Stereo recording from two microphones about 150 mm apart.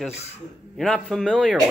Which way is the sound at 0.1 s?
45° left (ahead or behind).